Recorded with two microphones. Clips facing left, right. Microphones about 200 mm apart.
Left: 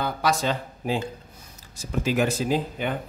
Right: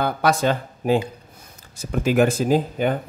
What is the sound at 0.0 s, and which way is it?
Speech, 55° right (ahead or behind).